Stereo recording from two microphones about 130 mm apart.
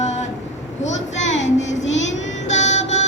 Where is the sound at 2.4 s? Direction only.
65° left (ahead or behind).